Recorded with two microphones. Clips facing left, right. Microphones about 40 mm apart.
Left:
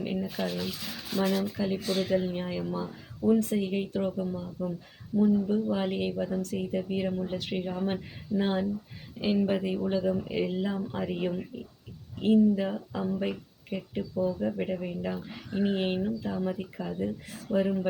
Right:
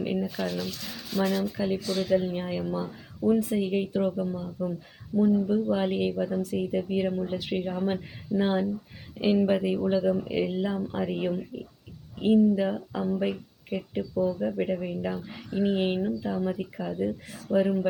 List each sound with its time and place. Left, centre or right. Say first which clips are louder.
0.0 s a sound: right 3 dB; centre
0.3 s speech: right 1 dB; centre
1.8 s speech: even; left
2.0 s speech: right 3 dB; centre